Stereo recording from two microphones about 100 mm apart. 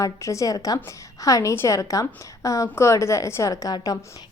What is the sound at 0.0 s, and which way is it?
A woman's voice, 30° left (ahead or behind).